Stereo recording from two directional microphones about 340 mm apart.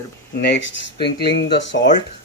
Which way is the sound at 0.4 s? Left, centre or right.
Left.